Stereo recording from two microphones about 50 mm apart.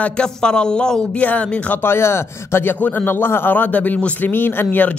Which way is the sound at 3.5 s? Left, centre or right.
Left.